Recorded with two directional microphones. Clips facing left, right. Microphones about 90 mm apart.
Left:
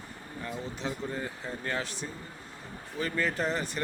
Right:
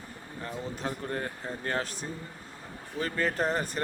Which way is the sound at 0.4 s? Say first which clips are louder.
Right 1 dB; 45° right (ahead or behind).